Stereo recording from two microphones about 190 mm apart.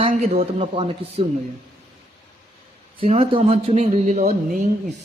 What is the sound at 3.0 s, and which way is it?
Speech, 30° right (ahead or behind).